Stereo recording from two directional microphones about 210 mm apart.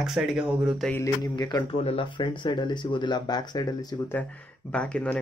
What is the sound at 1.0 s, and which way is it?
Speech, 15° left (ahead or behind).